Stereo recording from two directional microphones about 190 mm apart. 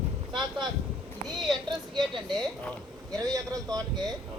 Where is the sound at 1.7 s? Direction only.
25° right (ahead or behind).